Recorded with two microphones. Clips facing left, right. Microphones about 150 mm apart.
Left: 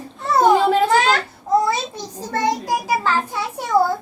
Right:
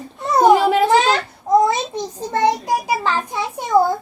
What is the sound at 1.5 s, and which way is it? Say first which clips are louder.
Babbling: right 3 dB; 20° right (ahead or behind).